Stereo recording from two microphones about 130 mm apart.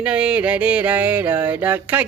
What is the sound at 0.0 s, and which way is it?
Music, 10° right (ahead or behind).